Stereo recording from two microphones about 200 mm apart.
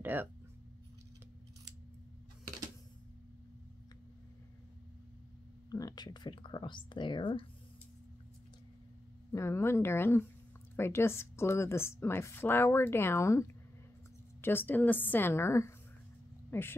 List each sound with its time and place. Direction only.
0.0 s speech: 10° right (ahead or behind)
5.7 s speech: 20° left (ahead or behind)
9.3 s a woman's voice: 15° left (ahead or behind)
16.4 s a sound: 10° left (ahead or behind)